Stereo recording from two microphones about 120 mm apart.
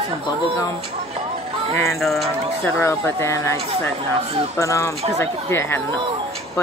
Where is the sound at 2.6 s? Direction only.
20° left (ahead or behind).